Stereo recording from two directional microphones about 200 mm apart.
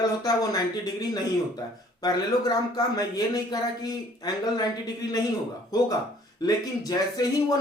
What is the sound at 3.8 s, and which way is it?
Speech, 20° left (ahead or behind).